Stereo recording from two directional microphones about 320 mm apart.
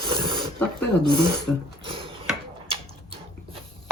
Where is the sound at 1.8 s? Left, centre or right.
Centre.